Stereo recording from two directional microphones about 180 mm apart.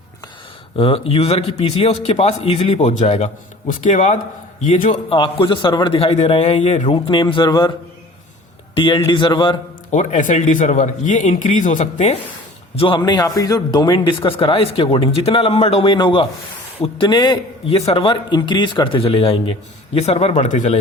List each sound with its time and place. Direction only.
0.8 s a man's voice: 30° left (ahead or behind)
5.1 s a man's voice: 25° left (ahead or behind)
6.8 s speech: 30° left (ahead or behind)
8.7 s speech: 30° left (ahead or behind)
9.9 s speech: 40° left (ahead or behind)
12.7 s a man's voice: 30° left (ahead or behind)